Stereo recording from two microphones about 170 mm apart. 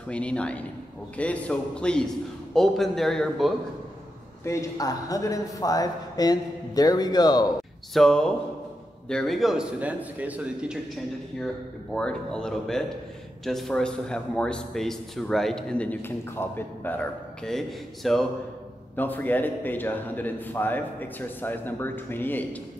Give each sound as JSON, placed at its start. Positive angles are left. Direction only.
{"t": 0.1, "sound": "a man's voice", "side_deg": 5}
{"t": 4.5, "sound": "speech", "side_deg": 20}
{"t": 7.9, "sound": "a man's voice", "side_deg": 5}